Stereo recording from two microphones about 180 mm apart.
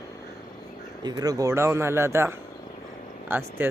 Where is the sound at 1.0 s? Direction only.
20° right (ahead or behind).